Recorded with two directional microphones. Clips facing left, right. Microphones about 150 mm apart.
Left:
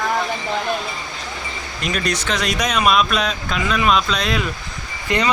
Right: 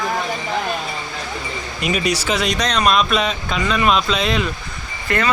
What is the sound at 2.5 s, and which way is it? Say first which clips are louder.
Speech: left 2 dB; 10° left (ahead or behind).